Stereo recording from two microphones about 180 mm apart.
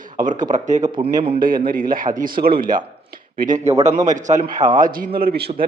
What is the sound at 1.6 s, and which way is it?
A man's voice, 50° right (ahead or behind).